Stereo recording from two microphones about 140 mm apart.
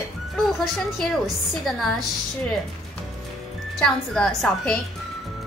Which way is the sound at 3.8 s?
5° left (ahead or behind).